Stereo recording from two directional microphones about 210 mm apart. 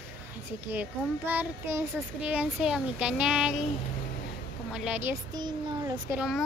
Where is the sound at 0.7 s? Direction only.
10° right (ahead or behind).